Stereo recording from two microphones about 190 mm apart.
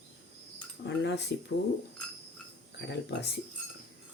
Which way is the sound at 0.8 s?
65° left (ahead or behind).